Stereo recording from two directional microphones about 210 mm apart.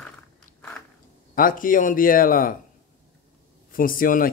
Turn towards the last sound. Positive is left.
turn(degrees=40)  # may be behind; listen again after turning